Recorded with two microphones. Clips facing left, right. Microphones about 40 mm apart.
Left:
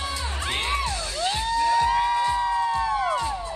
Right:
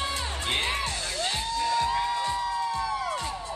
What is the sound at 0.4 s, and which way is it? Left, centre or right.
Music, left.